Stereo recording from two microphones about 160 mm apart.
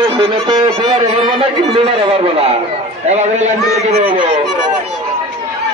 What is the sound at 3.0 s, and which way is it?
A man's voice, 45° right (ahead or behind).